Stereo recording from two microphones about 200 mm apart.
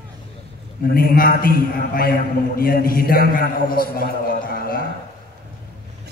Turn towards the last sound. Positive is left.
turn(degrees=45)  # may be behind; listen again after turning